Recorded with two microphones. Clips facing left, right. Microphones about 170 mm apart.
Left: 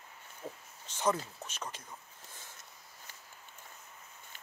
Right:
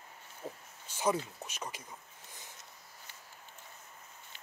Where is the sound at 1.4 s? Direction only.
15° right (ahead or behind).